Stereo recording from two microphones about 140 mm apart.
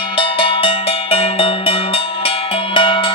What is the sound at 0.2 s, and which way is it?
Music, 40° left (ahead or behind).